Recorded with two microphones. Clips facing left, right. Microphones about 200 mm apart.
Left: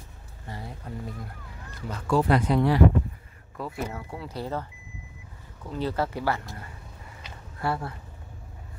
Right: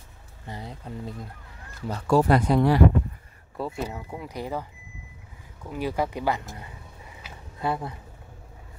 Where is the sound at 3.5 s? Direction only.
25° right (ahead or behind).